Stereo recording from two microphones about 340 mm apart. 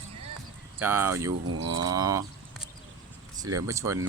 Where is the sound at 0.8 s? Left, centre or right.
Centre.